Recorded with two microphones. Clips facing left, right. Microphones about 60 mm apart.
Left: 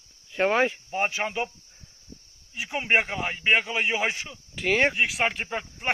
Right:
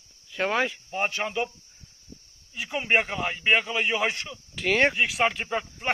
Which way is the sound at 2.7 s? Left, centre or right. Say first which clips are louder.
Even; centre.